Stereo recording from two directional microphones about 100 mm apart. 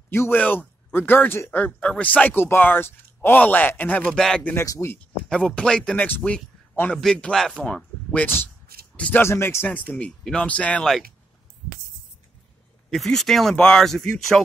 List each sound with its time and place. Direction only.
0.1 s speech: 20° left (ahead or behind); by 4.6 s 5° left (ahead or behind)
4.6 s speech: 30° left (ahead or behind)
4.9 s speech: 10° left (ahead or behind)
9.7 s speech: 10° left (ahead or behind)
12.9 s speech: centre (ahead or behind)